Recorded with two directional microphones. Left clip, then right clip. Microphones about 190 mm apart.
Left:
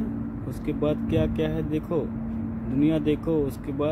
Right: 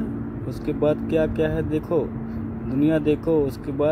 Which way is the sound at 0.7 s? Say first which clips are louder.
Right 5 dB; 5° left (ahead or behind).